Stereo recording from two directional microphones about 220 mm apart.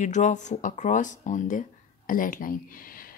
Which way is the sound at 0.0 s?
35° left (ahead or behind).